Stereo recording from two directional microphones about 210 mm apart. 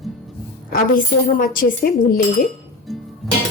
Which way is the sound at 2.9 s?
Centre (ahead or behind).